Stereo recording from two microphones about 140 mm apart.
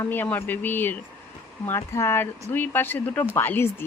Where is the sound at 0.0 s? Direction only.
15° left (ahead or behind).